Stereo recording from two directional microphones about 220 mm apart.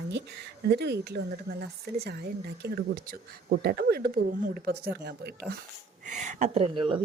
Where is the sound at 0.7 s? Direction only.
50° right (ahead or behind).